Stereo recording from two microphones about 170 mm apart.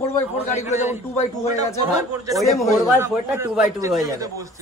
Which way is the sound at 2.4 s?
Centre (ahead or behind).